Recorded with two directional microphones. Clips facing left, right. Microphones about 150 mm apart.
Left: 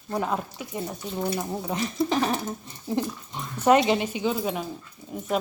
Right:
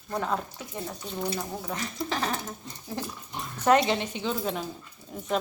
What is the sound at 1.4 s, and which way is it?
Speech, 20° left (ahead or behind).